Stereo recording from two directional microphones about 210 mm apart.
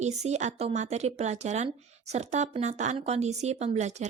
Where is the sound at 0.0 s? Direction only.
35° right (ahead or behind).